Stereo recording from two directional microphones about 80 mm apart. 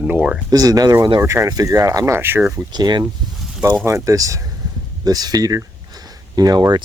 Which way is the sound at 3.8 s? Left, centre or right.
Right.